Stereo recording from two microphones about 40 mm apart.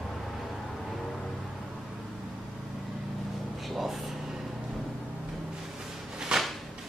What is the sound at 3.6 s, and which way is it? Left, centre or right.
Speech, centre.